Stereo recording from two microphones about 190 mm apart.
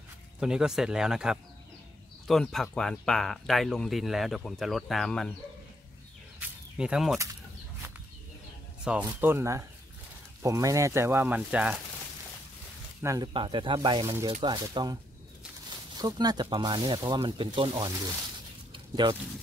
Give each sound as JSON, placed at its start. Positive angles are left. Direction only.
{"t": 0.4, "sound": "speech", "side_deg": -5}
{"t": 6.4, "sound": "a sound", "side_deg": -5}
{"t": 8.8, "sound": "speech", "side_deg": -10}
{"t": 13.0, "sound": "speech", "side_deg": -20}
{"t": 16.0, "sound": "speech", "side_deg": -20}
{"t": 18.7, "sound": "a sound", "side_deg": -25}